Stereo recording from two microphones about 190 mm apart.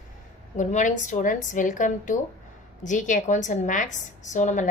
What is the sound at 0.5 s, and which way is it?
A woman's voice, 40° left (ahead or behind).